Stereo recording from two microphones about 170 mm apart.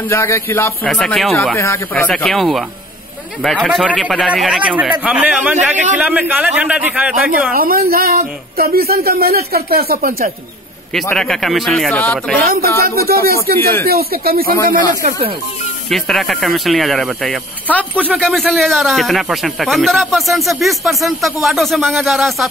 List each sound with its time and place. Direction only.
0.1 s speech: 15° left (ahead or behind)
0.8 s speech: centre (ahead or behind)
1.6 s speech: 15° left (ahead or behind)
2.0 s a man's voice: centre (ahead or behind)
7.5 s speech: 60° right (ahead or behind)
11.1 s speech: 5° left (ahead or behind)
12.4 s speech: 60° right (ahead or behind)
15.9 s speech: centre (ahead or behind)
18.0 s speech: 5° right (ahead or behind)